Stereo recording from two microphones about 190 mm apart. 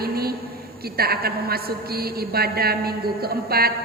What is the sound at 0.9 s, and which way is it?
A woman's voice, 55° right (ahead or behind).